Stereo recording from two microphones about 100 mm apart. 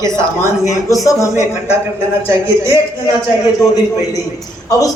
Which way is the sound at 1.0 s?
35° left (ahead or behind).